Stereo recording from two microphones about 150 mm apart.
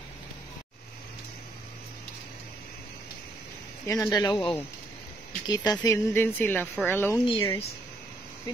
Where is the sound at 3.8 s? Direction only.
20° left (ahead or behind).